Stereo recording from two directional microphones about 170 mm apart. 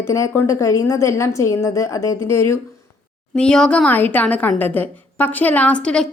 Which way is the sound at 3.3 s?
5° left (ahead or behind).